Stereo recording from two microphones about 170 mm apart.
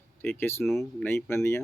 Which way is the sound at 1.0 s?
15° left (ahead or behind).